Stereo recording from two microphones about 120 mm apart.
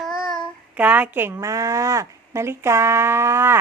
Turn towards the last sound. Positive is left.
turn(degrees=-20)  # may be behind; listen again after turning